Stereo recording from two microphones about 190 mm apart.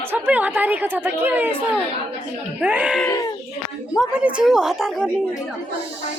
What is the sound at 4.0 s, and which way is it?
A woman's voice, 5° right (ahead or behind).